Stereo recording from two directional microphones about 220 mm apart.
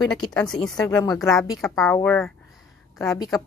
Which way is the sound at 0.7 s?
15° left (ahead or behind).